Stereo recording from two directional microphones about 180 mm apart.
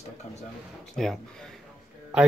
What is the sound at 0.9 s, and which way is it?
Speech, centre (ahead or behind).